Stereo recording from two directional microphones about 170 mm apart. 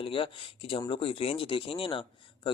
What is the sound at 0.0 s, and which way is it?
A man's voice, 30° left (ahead or behind).